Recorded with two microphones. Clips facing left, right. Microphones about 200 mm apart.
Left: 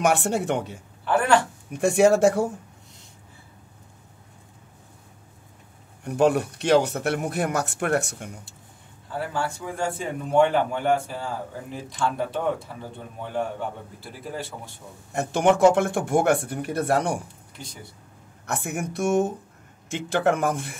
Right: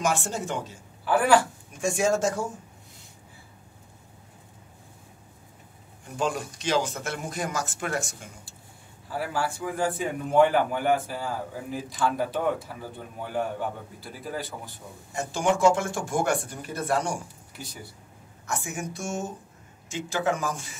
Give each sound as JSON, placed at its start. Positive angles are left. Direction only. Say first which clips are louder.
{"t": 0.0, "sound": "speech", "louder": "left 6 dB", "side_deg": 65}
{"t": 1.0, "sound": "a man's voice", "louder": "even", "side_deg": -5}
{"t": 1.7, "sound": "speech", "louder": "left 7 dB", "side_deg": 65}
{"t": 6.0, "sound": "speech", "louder": "left 9 dB", "side_deg": 65}
{"t": 9.1, "sound": "a man's voice", "louder": "left 1 dB", "side_deg": -5}
{"t": 15.1, "sound": "speech", "louder": "left 5 dB", "side_deg": 60}
{"t": 17.6, "sound": "speech", "louder": "even", "side_deg": -5}
{"t": 18.4, "sound": "speech", "louder": "left 4 dB", "side_deg": 60}